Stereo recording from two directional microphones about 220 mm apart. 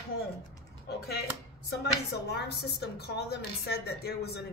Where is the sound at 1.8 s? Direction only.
50° left (ahead or behind).